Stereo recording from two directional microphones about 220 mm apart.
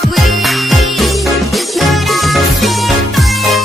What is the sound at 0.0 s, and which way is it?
Music, centre (ahead or behind).